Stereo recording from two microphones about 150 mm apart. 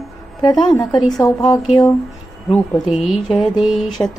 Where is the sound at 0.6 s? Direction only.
30° left (ahead or behind).